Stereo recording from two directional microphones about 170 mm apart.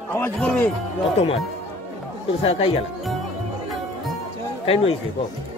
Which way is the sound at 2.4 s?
35° left (ahead or behind).